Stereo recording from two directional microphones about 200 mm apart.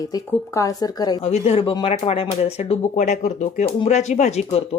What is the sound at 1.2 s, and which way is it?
Speech, 30° left (ahead or behind).